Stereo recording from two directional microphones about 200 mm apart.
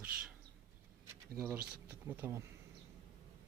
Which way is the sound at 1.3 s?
10° right (ahead or behind).